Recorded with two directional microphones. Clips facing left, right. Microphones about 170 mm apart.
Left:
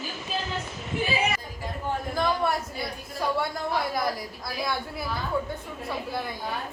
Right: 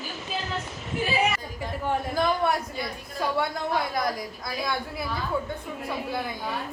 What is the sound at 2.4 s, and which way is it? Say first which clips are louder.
Speech: right 1 dB; centre (ahead or behind).